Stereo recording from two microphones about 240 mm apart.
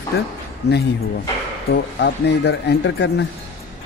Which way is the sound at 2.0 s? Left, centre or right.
Left.